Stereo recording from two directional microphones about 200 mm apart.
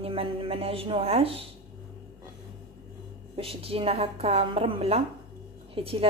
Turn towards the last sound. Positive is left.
turn(degrees=-30)  # may be behind; listen again after turning